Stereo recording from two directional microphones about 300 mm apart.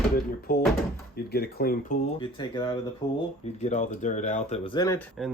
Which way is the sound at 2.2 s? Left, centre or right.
Centre.